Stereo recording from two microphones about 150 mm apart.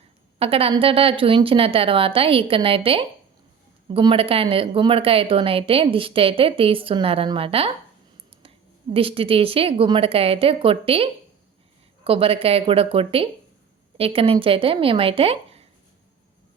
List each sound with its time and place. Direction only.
0.3 s a woman's voice: 40° right (ahead or behind)